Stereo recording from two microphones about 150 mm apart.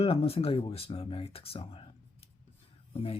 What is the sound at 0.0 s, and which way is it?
Speech, 40° left (ahead or behind).